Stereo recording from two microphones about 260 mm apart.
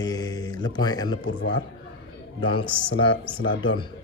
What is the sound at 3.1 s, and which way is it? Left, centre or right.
Speech, left.